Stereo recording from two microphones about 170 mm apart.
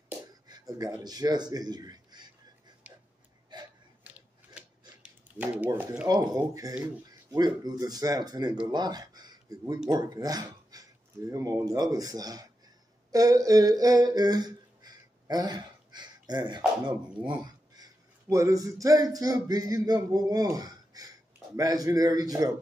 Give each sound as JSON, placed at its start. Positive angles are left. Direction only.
{"t": 0.5, "sound": "a man's voice", "side_deg": -20}
{"t": 3.5, "sound": "gasp", "side_deg": -25}
{"t": 4.6, "sound": "a sound", "side_deg": -10}
{"t": 8.6, "sound": "speech", "side_deg": -25}
{"t": 17.1, "sound": "speech", "side_deg": -5}
{"t": 18.3, "sound": "a sound", "side_deg": -20}